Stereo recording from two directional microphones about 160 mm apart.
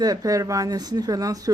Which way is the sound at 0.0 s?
25° right (ahead or behind).